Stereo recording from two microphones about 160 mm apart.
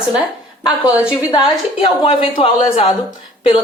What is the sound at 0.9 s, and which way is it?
Speech, 5° right (ahead or behind).